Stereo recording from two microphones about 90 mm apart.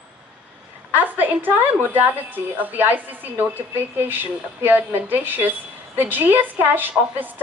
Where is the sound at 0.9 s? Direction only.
20° right (ahead or behind).